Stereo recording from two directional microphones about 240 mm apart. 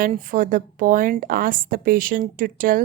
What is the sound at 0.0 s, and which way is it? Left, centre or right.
A woman's voice, right.